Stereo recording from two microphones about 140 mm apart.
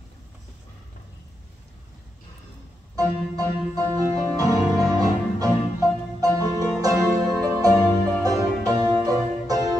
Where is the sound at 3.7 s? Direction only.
25° right (ahead or behind).